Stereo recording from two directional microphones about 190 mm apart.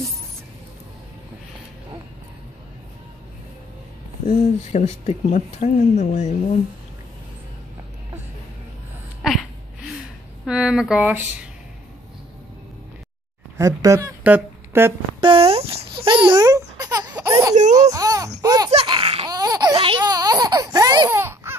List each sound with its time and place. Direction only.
4.3 s speech: 35° left (ahead or behind)
9.2 s a sound: centre (ahead or behind)
10.4 s speech: 5° right (ahead or behind)
13.6 s speech: 20° right (ahead or behind)
15.1 s babbling: 30° right (ahead or behind)
17.9 s a sound: 20° right (ahead or behind)
18.4 s baby laughter: 20° right (ahead or behind)
18.7 s laughter: 30° right (ahead or behind)
19.3 s a sound: 20° right (ahead or behind)